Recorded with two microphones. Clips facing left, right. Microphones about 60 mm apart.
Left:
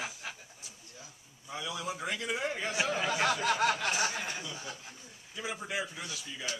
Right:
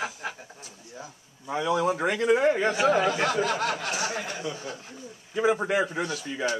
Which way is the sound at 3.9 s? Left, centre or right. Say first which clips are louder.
Right 3 dB; right.